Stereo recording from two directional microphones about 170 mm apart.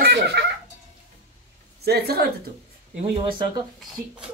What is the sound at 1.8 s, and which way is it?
Speech, 70° right (ahead or behind).